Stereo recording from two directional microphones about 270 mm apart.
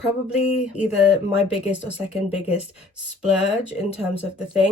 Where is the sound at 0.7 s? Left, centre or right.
Centre.